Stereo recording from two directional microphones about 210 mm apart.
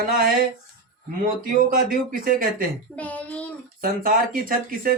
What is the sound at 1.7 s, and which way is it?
Speech, 40° right (ahead or behind).